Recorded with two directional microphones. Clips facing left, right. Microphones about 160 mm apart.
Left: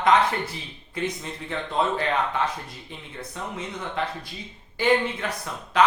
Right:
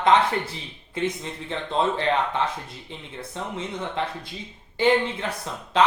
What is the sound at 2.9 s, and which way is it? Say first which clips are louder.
Speech: right 1 dB; 25° right (ahead or behind).